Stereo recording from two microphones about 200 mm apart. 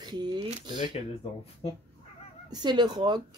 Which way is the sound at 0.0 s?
20° right (ahead or behind).